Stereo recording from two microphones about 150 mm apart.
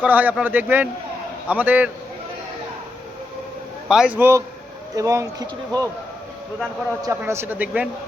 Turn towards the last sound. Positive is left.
turn(degrees=-10)  # may be behind; listen again after turning